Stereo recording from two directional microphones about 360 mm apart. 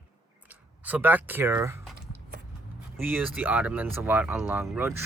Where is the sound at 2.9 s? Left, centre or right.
Centre.